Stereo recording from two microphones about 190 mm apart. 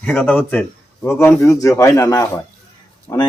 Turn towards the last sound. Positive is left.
turn(degrees=10)  # may be behind; listen again after turning